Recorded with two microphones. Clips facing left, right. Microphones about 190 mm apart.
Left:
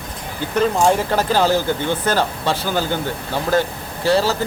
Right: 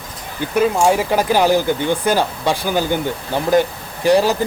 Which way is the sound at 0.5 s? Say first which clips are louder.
Right 1 dB; 10° right (ahead or behind).